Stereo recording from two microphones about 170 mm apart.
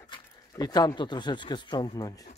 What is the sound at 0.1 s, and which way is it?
Speech, 25° left (ahead or behind).